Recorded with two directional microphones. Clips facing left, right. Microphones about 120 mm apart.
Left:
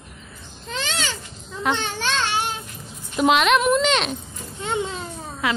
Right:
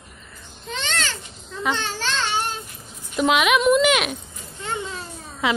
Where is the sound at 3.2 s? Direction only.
Centre (ahead or behind).